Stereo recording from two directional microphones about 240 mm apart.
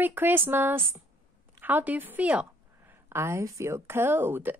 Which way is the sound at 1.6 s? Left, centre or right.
Centre.